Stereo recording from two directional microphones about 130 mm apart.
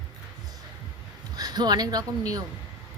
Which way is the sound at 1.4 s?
30° right (ahead or behind).